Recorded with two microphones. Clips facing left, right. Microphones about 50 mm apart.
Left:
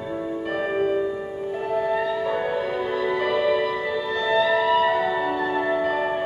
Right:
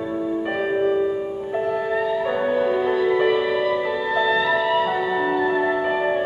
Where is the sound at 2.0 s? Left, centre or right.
Centre.